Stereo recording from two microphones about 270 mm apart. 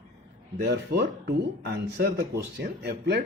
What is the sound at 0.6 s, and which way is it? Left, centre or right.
Speech, right.